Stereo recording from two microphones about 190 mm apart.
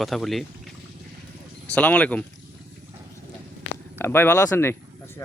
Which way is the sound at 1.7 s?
5° left (ahead or behind).